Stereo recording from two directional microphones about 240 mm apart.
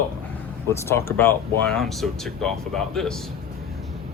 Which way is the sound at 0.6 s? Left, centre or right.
Centre.